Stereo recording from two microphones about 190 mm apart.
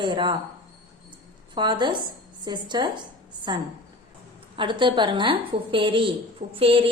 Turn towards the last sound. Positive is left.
turn(degrees=-30)  # may be behind; listen again after turning